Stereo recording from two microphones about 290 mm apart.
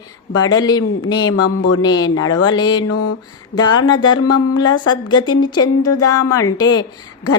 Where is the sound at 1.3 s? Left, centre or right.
Left.